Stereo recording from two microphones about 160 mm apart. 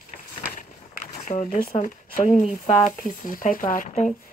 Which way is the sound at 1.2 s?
50° left (ahead or behind).